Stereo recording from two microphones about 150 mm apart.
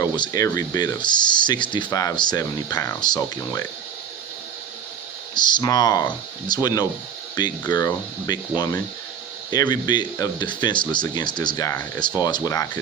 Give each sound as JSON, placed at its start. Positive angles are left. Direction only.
{"t": 0.0, "sound": "speech", "side_deg": 25}
{"t": 5.3, "sound": "speech", "side_deg": 30}